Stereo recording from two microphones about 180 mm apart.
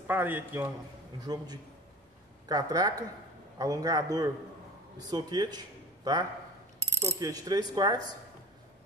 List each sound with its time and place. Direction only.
0.0 s a man's voice: 10° right (ahead or behind)
1.2 s coin: 20° right (ahead or behind)
5.1 s speech: 25° right (ahead or behind)
7.0 s coin: 20° right (ahead or behind)